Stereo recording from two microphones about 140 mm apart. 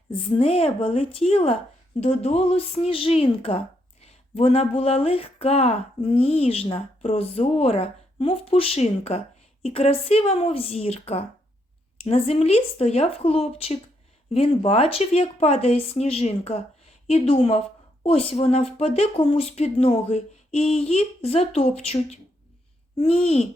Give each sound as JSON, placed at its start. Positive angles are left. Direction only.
{"t": 0.3, "sound": "speech", "side_deg": 45}